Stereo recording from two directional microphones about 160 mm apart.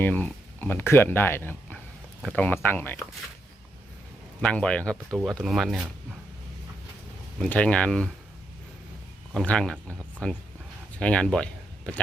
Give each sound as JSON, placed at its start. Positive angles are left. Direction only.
{"t": 0.0, "sound": "speech", "side_deg": 10}
{"t": 4.4, "sound": "speech", "side_deg": 5}
{"t": 7.3, "sound": "speech", "side_deg": 5}
{"t": 9.3, "sound": "speech", "side_deg": 5}